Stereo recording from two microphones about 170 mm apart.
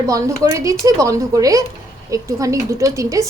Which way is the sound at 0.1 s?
20° right (ahead or behind).